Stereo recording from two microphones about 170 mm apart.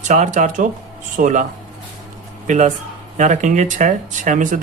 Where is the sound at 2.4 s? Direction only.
45° right (ahead or behind).